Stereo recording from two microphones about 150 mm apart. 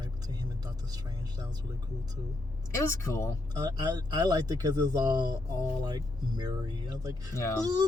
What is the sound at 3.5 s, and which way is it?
Speech, 25° right (ahead or behind).